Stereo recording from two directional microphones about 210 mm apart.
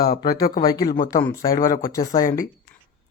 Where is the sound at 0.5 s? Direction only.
20° left (ahead or behind).